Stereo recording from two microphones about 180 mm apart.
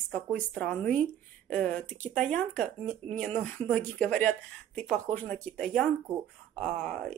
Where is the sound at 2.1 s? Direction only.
5° left (ahead or behind).